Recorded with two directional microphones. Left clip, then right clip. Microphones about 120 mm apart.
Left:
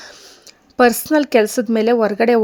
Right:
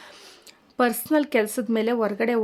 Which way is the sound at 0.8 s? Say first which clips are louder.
Left 8 dB; 50° left (ahead or behind).